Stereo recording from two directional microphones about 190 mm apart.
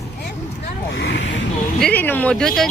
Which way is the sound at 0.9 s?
75° left (ahead or behind).